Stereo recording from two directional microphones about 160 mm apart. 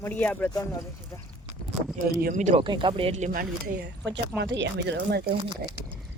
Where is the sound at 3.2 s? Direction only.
65° right (ahead or behind); by 5.3 s 90° right.